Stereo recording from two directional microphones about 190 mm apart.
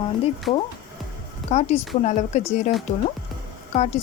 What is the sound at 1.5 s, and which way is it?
Speech, 35° left (ahead or behind).